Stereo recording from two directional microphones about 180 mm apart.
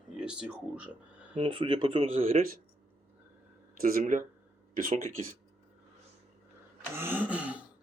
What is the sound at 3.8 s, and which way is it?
Speech, 50° right (ahead or behind).